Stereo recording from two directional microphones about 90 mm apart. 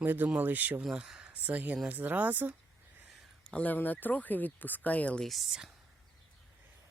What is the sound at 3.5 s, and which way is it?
Speech, 15° left (ahead or behind).